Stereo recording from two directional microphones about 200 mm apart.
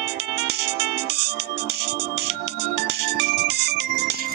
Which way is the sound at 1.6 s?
55° right (ahead or behind).